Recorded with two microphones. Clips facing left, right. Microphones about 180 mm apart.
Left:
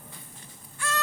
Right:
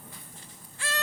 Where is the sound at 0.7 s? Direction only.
30° right (ahead or behind).